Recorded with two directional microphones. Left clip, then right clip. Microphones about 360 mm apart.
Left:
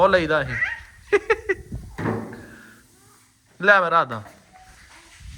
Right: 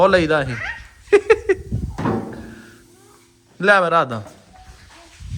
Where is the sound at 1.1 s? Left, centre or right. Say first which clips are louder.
Right 6 dB; centre.